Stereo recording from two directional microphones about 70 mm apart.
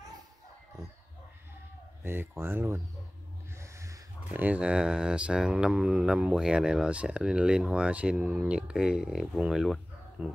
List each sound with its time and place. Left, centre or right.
2.0 s speech: right
3.6 s a sound: right
4.3 s speech: right; by 9.8 s centre
10.2 s speech: centre